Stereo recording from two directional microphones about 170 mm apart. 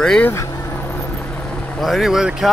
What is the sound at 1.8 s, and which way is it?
Speech, centre (ahead or behind).